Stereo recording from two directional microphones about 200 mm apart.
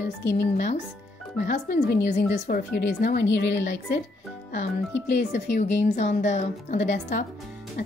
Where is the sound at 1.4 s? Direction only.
40° left (ahead or behind); by 4.0 s 60° left (ahead or behind).